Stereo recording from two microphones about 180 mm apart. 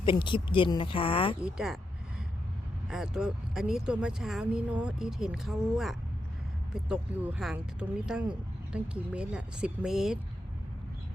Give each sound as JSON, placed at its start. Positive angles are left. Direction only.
{"t": 0.0, "sound": "speech", "side_deg": 25}
{"t": 1.4, "sound": "speech", "side_deg": -5}
{"t": 2.8, "sound": "speech", "side_deg": -5}